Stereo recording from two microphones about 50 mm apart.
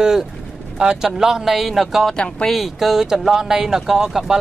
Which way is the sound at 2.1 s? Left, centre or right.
Centre.